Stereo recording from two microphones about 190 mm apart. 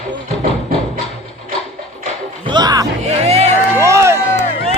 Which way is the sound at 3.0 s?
35° right (ahead or behind).